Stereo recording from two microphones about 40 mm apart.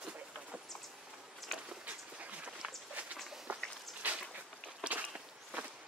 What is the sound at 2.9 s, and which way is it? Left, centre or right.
Walk, right.